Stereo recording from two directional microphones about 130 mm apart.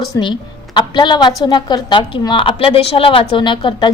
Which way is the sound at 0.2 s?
35° left (ahead or behind).